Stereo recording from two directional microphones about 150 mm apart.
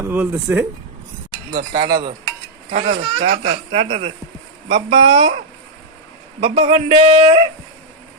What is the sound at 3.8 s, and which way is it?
Speech, 45° right (ahead or behind).